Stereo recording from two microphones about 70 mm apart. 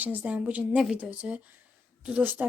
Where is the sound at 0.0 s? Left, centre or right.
Right.